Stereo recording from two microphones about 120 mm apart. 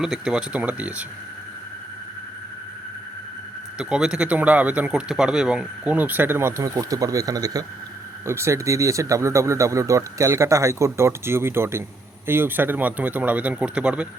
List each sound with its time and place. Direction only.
0.0 s speech: 5° right (ahead or behind)
3.8 s speech: 5° right (ahead or behind)